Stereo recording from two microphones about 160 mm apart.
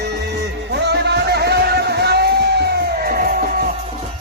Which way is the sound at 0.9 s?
90° right.